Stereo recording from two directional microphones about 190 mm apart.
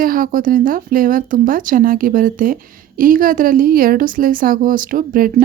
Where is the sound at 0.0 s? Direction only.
50° right (ahead or behind).